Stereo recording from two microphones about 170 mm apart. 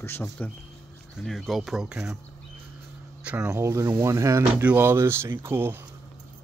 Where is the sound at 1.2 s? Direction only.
Centre (ahead or behind).